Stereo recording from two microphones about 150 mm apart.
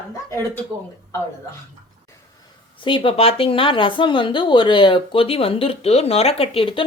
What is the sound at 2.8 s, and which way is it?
Speech, 35° left (ahead or behind).